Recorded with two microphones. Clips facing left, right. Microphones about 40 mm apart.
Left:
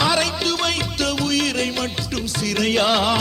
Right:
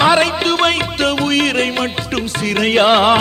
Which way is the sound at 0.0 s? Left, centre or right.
Right.